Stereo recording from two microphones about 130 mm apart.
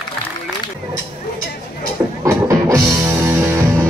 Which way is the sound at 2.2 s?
25° right (ahead or behind).